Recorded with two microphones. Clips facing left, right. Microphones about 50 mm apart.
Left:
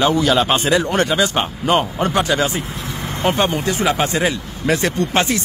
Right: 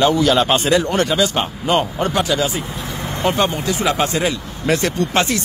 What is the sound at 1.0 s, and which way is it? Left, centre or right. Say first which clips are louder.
Speech: even; left.